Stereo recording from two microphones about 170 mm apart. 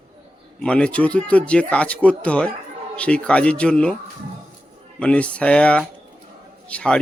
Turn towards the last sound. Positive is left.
turn(degrees=5)  # may be behind; listen again after turning